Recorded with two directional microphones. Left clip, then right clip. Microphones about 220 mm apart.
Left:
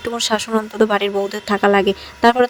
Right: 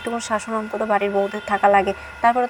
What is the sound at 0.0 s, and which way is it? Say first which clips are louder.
Speech: left 4 dB; 45° left (ahead or behind).